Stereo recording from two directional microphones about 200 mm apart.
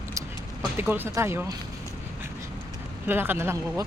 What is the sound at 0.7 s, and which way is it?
Speech, 10° right (ahead or behind).